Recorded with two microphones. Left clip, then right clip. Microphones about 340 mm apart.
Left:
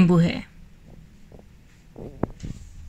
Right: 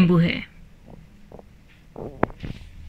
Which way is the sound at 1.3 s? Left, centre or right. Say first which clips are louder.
Right 6 dB; right.